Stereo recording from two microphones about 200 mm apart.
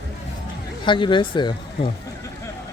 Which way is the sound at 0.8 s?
25° left (ahead or behind).